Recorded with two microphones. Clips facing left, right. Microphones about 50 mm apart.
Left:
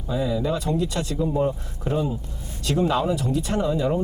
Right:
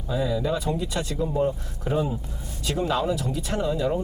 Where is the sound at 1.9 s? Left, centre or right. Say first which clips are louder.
Even; centre.